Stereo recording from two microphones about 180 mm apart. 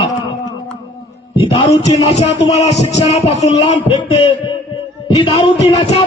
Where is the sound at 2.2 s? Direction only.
40° left (ahead or behind).